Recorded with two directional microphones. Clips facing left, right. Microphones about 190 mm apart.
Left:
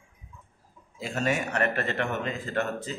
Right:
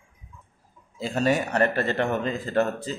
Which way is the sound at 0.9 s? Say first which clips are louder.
Right 5 dB; 30° right (ahead or behind).